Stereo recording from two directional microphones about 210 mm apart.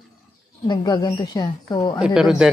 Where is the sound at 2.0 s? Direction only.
5° right (ahead or behind).